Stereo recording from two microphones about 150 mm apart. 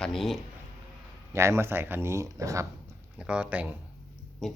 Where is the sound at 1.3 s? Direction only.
20° right (ahead or behind).